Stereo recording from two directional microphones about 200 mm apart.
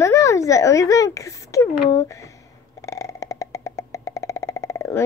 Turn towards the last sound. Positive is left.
turn(degrees=15)  # may be behind; listen again after turning